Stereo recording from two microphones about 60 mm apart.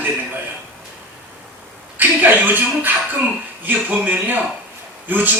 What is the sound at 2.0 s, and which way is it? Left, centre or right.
A man's voice, right.